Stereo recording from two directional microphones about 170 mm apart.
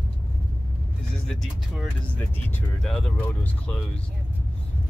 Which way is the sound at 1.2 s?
Centre (ahead or behind).